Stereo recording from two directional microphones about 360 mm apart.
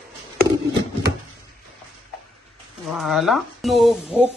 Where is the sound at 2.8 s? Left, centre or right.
Centre.